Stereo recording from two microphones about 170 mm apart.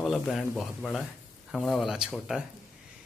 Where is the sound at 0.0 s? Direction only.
Centre (ahead or behind).